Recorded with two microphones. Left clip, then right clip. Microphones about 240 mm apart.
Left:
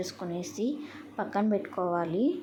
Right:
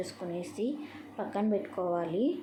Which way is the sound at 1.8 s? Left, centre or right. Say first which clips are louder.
Left 3 dB; left.